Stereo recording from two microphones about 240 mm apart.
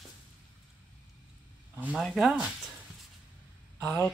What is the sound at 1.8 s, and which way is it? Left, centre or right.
Speech, centre.